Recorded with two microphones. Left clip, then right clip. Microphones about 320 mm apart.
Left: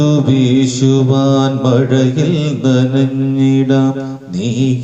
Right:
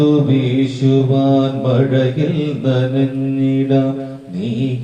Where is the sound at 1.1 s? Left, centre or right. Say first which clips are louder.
Left 1 dB; left.